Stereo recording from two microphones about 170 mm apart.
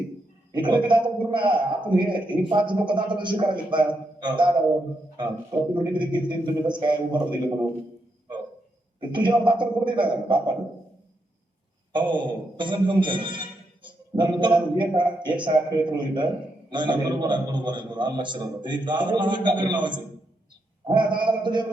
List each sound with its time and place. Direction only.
0.5 s a man's voice: 25° right (ahead or behind)
5.7 s a man's voice: 25° right (ahead or behind)
9.0 s a man's voice: 30° right (ahead or behind)
11.9 s a man's voice: 30° right (ahead or behind)